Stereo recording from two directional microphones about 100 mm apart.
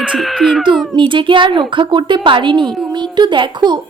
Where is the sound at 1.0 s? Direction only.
55° right (ahead or behind).